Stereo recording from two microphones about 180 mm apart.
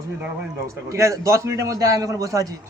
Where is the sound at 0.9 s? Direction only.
15° right (ahead or behind).